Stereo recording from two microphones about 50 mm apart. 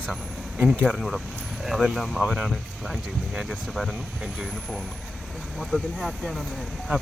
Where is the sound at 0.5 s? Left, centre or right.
Centre.